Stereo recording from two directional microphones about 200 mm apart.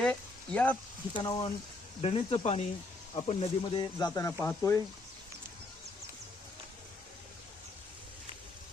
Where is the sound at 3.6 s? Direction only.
20° left (ahead or behind).